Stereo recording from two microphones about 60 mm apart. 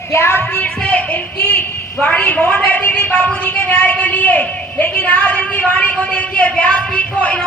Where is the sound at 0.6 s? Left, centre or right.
Left.